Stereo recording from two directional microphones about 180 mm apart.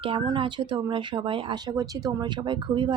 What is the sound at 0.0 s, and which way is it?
Speech, 30° right (ahead or behind).